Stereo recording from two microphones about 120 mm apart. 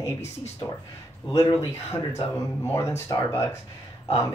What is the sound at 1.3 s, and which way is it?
Speech, 25° left (ahead or behind).